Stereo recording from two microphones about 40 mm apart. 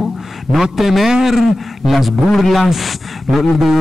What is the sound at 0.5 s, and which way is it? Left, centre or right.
A man's voice, centre.